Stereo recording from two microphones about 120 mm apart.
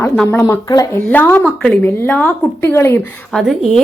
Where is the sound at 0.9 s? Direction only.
15° left (ahead or behind).